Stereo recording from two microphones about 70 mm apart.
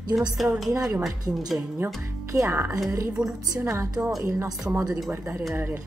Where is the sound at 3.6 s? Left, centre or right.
Right.